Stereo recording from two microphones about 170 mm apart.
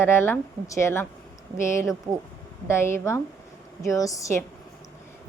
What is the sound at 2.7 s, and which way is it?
A woman's voice, 15° left (ahead or behind).